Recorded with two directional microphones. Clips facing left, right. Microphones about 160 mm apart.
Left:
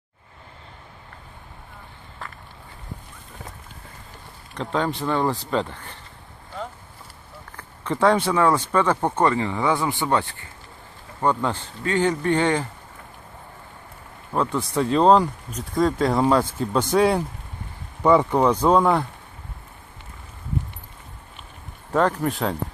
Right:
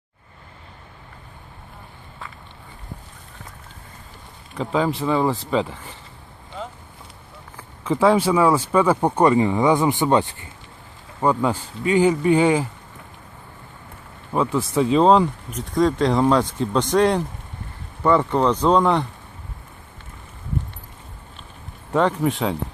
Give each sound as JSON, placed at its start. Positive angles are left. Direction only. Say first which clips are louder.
{"t": 4.5, "sound": "speech", "louder": "right 3 dB", "side_deg": -5}
{"t": 7.5, "sound": "speech", "louder": "right 4 dB", "side_deg": -5}
{"t": 11.2, "sound": "speech", "louder": "right 3 dB", "side_deg": -10}
{"t": 14.3, "sound": "speech", "louder": "right 3 dB", "side_deg": 0}
{"t": 21.9, "sound": "speech", "louder": "right 2 dB", "side_deg": 0}